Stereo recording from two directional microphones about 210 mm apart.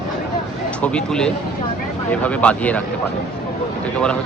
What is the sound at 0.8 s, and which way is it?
Speech, 5° left (ahead or behind).